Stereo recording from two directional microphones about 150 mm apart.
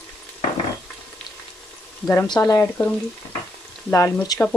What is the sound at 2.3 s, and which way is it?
Speech, 20° left (ahead or behind).